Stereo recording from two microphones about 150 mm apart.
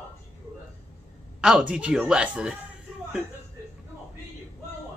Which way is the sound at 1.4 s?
5° right (ahead or behind).